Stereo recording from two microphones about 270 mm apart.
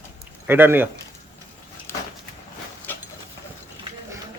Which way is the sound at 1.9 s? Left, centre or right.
Centre.